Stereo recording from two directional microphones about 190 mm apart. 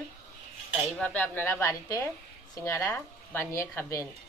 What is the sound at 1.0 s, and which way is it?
A woman's voice, 10° left (ahead or behind).